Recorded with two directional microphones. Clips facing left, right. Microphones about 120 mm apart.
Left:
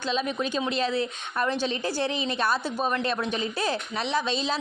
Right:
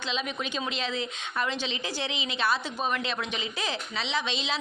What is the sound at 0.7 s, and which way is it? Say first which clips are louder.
Speech: left 6 dB; 35° left (ahead or behind).